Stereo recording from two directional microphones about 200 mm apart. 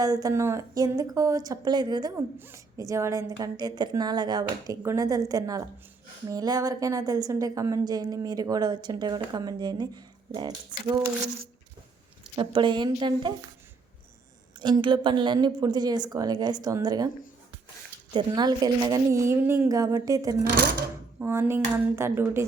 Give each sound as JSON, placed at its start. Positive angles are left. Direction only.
{"t": 0.0, "sound": "a woman's voice", "side_deg": -20}
{"t": 12.4, "sound": "a woman's voice", "side_deg": -25}
{"t": 14.6, "sound": "a woman's voice", "side_deg": -25}
{"t": 18.1, "sound": "a woman's voice", "side_deg": -20}